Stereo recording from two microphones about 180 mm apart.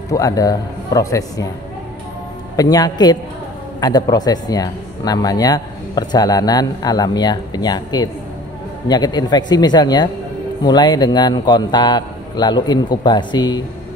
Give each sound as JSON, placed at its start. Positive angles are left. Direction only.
{"t": 0.1, "sound": "speech", "side_deg": 20}
{"t": 2.5, "sound": "speech", "side_deg": 20}